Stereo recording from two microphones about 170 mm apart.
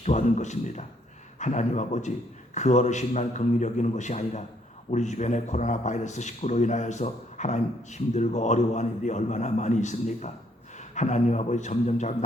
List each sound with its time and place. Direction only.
0.0 s speech: 40° left (ahead or behind)